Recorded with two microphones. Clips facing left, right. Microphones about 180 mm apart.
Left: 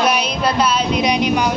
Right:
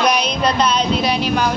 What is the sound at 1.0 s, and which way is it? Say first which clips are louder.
Speech: left 2 dB; 15° left (ahead or behind).